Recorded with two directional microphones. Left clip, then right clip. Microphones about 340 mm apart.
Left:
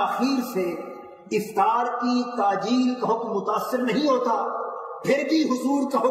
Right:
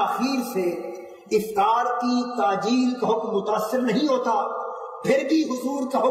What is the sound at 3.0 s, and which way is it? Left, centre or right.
A man's voice, right.